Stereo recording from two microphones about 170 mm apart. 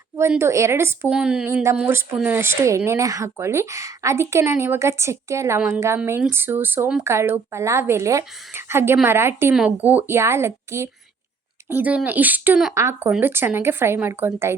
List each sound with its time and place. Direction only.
0.2 s speech: 15° right (ahead or behind)